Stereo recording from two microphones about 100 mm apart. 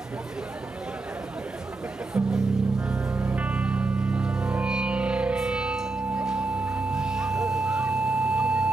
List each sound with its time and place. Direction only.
2.1 s music: 10° right (ahead or behind)